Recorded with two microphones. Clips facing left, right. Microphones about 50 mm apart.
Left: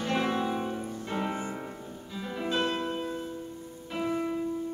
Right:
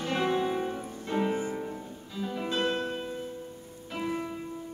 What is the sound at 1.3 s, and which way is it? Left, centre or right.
Music, left.